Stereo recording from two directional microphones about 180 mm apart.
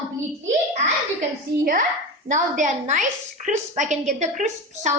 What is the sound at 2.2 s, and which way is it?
A woman's voice, 45° right (ahead or behind).